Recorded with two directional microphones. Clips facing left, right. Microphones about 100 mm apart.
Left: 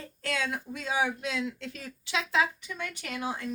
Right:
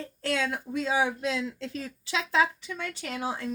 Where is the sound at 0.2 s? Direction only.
30° right (ahead or behind).